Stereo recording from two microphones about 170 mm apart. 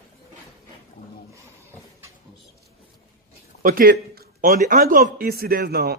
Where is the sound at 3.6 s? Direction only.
60° right (ahead or behind).